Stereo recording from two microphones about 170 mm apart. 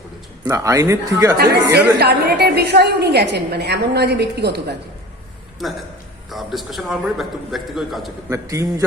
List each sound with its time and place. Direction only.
0.4 s speech: 20° right (ahead or behind)
1.7 s a woman's voice: 75° right (ahead or behind)
5.6 s a man's voice: centre (ahead or behind)
8.3 s a man's voice: 20° right (ahead or behind)